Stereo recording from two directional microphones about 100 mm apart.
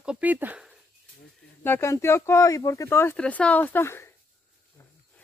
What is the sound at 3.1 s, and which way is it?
Speech, 10° left (ahead or behind).